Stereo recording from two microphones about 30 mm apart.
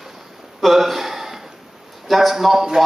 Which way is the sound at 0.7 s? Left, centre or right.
Centre.